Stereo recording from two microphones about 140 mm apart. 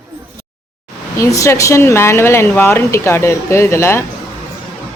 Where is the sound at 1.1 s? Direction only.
20° left (ahead or behind).